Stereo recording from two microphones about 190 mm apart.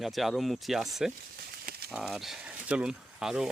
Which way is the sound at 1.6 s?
55° right (ahead or behind).